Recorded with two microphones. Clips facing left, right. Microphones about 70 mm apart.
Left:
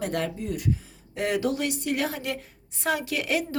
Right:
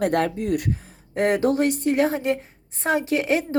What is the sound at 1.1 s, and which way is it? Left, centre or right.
Speech, right.